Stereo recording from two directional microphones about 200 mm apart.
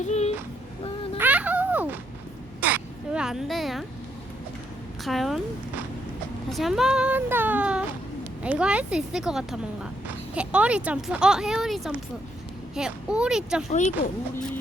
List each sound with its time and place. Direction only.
0.0 s child singing: 35° left (ahead or behind)
1.2 s a sound: 5° right (ahead or behind)
5.0 s speech: centre (ahead or behind)
6.5 s speech: centre (ahead or behind)
13.7 s speech: 35° left (ahead or behind)